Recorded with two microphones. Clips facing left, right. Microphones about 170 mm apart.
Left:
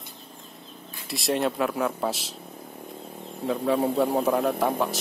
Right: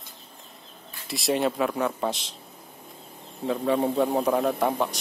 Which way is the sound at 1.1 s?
Centre (ahead or behind).